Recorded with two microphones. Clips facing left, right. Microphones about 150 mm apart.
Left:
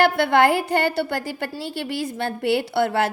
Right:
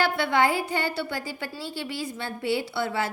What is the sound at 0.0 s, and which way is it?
A woman's voice, 65° left (ahead or behind).